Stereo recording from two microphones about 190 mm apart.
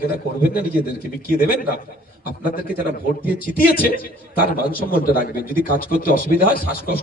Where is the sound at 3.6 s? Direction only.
50° left (ahead or behind).